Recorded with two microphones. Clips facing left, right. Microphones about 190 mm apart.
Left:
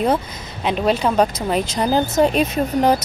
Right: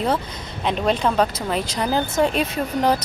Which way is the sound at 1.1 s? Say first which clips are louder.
Left 3 dB; 15° left (ahead or behind).